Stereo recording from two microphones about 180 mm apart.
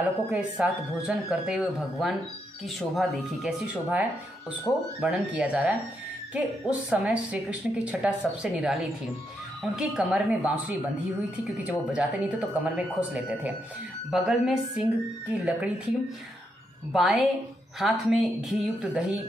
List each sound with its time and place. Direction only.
0.0 s a woman's voice: 5° right (ahead or behind)
4.7 s speech: 10° left (ahead or behind)
5.0 s a woman's voice: 5° right (ahead or behind)
11.9 s a woman's voice: 5° right (ahead or behind)
16.9 s a woman's voice: centre (ahead or behind)